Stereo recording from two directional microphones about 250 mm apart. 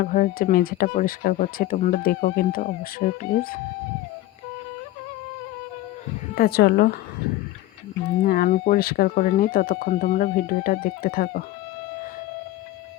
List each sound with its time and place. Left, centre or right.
0.0 s speech: left
6.3 s speech: left
8.2 s speech: left